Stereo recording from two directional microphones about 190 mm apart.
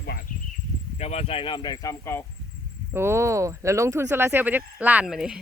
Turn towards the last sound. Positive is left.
turn(degrees=-5)  # may be behind; listen again after turning